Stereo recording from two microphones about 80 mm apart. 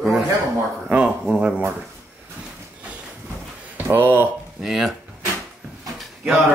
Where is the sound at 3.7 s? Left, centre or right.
Right.